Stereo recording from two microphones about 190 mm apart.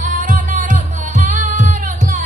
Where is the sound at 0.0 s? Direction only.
40° right (ahead or behind).